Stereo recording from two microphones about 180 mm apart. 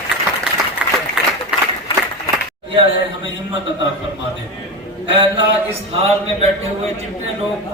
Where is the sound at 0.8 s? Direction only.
5° right (ahead or behind).